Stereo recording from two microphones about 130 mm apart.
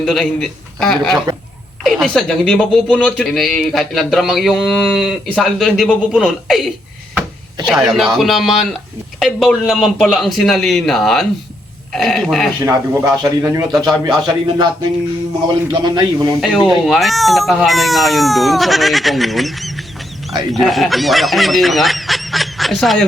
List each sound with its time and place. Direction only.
0.0 s a man's voice: centre (ahead or behind)
7.7 s speech: centre (ahead or behind)
12.6 s a man's voice: 25° right (ahead or behind)
16.6 s speech: centre (ahead or behind)